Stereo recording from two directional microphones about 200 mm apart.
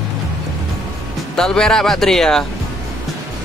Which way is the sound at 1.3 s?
5° left (ahead or behind).